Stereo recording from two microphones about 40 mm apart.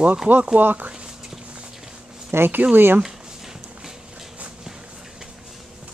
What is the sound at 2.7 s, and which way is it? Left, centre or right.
Speech, right.